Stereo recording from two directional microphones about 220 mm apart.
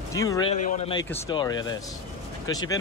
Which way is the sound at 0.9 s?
20° left (ahead or behind).